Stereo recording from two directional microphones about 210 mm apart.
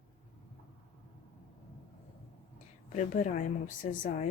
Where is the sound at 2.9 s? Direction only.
35° left (ahead or behind).